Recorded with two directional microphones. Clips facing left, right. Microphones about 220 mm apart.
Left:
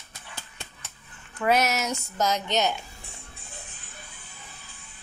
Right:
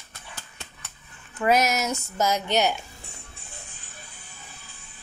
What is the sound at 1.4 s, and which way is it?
A woman's voice, 10° right (ahead or behind).